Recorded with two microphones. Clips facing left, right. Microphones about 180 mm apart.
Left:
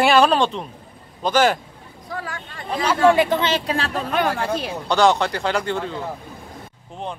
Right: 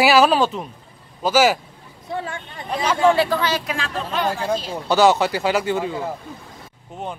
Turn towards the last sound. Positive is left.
turn(degrees=-5)  # may be behind; listen again after turning